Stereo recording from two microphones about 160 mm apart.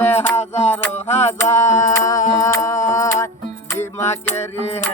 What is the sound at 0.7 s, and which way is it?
Music, 15° left (ahead or behind).